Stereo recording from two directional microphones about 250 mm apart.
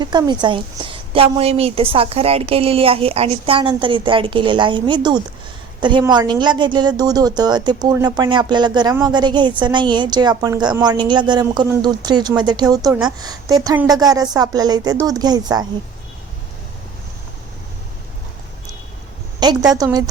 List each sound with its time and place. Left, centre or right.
0.0 s a woman's voice: centre
19.7 s a woman's voice: centre